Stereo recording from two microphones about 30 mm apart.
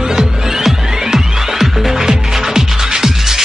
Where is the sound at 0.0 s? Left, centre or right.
Centre.